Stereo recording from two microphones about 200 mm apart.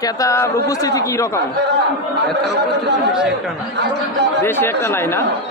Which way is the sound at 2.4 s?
60° right (ahead or behind).